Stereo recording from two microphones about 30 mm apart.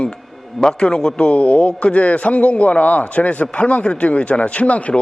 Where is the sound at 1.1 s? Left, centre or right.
Left.